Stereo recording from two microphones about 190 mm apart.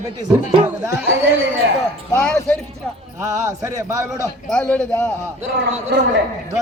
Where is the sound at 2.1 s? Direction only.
5° left (ahead or behind).